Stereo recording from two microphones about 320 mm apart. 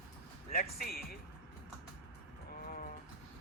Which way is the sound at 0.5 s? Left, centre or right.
Left.